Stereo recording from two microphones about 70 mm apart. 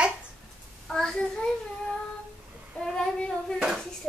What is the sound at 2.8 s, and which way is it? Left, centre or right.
Child singing, centre.